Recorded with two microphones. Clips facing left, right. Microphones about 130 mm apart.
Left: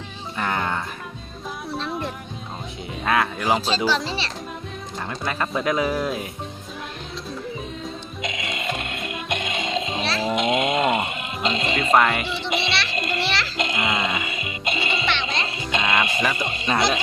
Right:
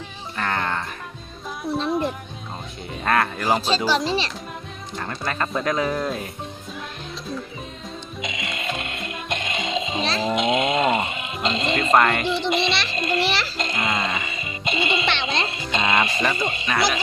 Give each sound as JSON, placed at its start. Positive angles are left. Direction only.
{"t": 0.3, "sound": "music", "side_deg": 10}
{"t": 1.7, "sound": "music", "side_deg": -15}
{"t": 3.0, "sound": "speech", "side_deg": 0}
{"t": 3.8, "sound": "speech", "side_deg": -15}
{"t": 4.9, "sound": "speech", "side_deg": 5}
{"t": 8.2, "sound": "music", "side_deg": 0}
{"t": 10.2, "sound": "speech", "side_deg": 5}
{"t": 13.1, "sound": "a sound", "side_deg": -15}
{"t": 13.6, "sound": "music", "side_deg": 15}
{"t": 15.1, "sound": "music", "side_deg": -25}
{"t": 15.7, "sound": "speech", "side_deg": 0}